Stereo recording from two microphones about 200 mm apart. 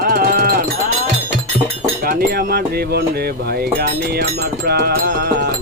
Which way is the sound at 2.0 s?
50° right (ahead or behind).